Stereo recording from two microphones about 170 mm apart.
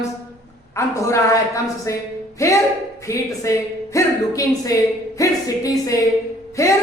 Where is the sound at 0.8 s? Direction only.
15° left (ahead or behind).